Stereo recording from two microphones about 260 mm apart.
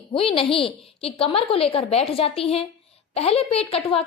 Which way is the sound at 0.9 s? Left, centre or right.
Left.